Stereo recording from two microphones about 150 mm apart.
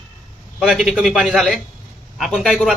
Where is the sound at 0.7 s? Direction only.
5° right (ahead or behind).